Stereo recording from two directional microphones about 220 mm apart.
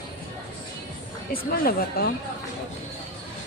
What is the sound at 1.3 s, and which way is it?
Speech, 45° left (ahead or behind).